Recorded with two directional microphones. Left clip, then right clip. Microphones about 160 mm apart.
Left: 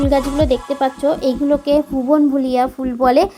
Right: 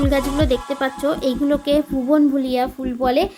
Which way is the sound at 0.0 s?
Centre (ahead or behind).